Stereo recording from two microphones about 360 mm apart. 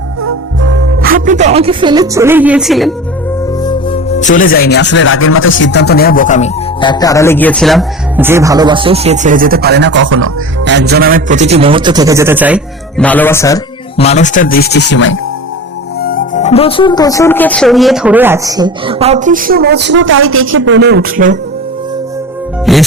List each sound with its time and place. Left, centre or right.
0.2 s speech: right; by 2.9 s centre
3.6 s speech: centre; by 21.3 s right
22.7 s music: centre